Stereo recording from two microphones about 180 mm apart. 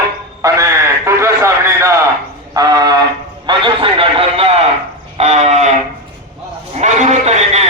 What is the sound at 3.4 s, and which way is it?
A man's voice, 30° right (ahead or behind).